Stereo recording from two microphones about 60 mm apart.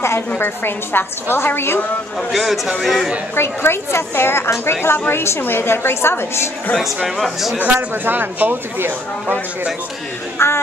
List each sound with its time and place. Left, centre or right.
0.4 s a woman's voice: left
2.3 s a man's voice: centre
3.3 s a woman's voice: left
7.2 s a man's voice: centre
7.5 s speech: right
10.4 s music: left